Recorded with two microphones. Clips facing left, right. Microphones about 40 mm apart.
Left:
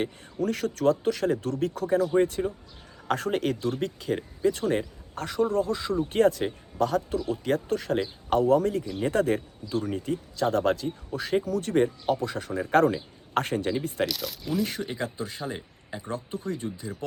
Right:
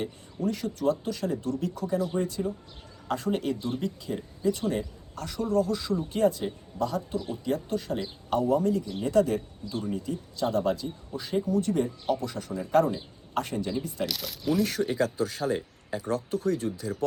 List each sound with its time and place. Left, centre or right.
0.0 s speech: left
6.1 s speech: left
14.1 s speech: centre
14.7 s speech: centre